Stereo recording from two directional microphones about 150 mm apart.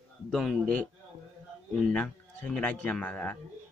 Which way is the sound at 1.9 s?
10° left (ahead or behind).